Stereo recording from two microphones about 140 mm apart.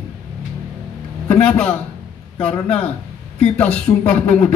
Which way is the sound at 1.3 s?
10° left (ahead or behind).